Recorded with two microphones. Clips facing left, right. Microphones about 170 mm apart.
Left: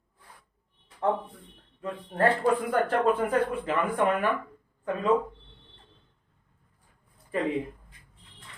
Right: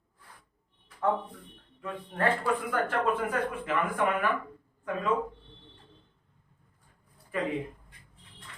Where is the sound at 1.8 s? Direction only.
35° left (ahead or behind).